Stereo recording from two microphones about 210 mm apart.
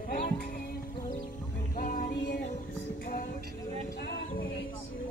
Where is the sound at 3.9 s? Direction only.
55° left (ahead or behind).